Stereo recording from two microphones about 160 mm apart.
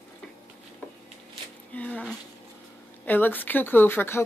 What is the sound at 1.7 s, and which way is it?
Speech, 10° left (ahead or behind).